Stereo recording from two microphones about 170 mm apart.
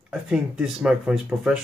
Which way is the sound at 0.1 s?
5° right (ahead or behind).